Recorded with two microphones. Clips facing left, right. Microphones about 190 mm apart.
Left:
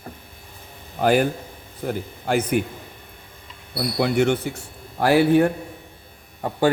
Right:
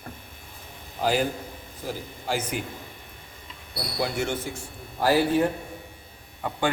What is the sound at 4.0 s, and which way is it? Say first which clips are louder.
Speech: left 8 dB; 65° left (ahead or behind).